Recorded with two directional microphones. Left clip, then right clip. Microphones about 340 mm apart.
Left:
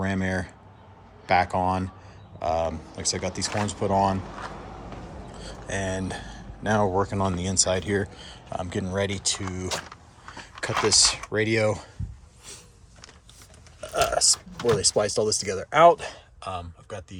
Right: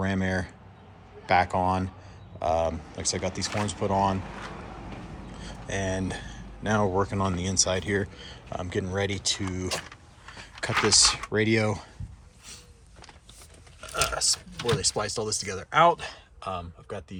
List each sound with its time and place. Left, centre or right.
0.0 s speech: centre
5.4 s a sound: centre
6.0 s speech: centre
13.8 s speech: centre
16.4 s speech: centre